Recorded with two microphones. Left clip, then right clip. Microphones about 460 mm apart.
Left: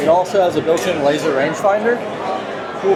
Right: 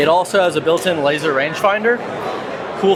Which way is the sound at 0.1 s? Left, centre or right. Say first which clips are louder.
Even; right.